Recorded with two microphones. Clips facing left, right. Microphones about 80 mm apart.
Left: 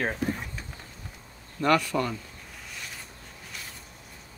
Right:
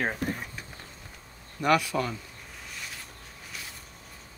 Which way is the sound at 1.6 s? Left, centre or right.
Centre.